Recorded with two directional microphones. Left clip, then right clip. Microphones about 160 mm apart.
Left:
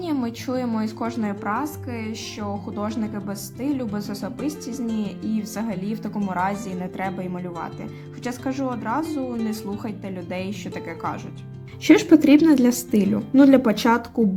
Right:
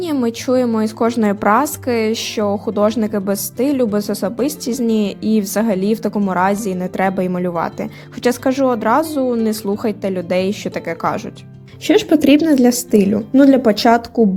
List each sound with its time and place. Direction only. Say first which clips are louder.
0.0 s a woman's voice: right 8 dB; 40° right (ahead or behind)
11.9 s a woman's voice: right 3 dB; 30° right (ahead or behind)